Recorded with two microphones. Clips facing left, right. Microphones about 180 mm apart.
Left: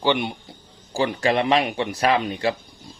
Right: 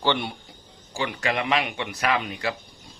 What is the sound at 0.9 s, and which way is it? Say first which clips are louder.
Speech: left 6 dB; 35° left (ahead or behind).